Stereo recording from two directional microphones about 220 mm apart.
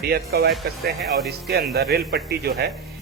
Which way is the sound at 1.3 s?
45° right (ahead or behind).